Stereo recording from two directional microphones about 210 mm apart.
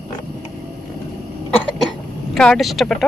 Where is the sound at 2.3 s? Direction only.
5° left (ahead or behind).